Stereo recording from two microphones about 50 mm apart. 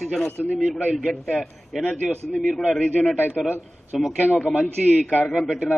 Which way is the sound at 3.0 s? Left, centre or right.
Centre.